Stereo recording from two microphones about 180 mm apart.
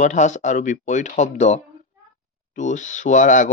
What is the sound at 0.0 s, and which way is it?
Speech, 40° left (ahead or behind).